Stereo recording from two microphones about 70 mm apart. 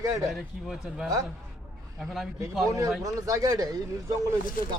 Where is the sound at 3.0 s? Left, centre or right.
Right.